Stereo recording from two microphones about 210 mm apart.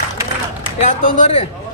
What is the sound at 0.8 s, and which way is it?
Speech, 35° left (ahead or behind).